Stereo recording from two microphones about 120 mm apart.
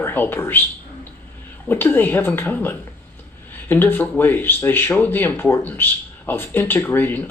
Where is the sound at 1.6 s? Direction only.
15° left (ahead or behind).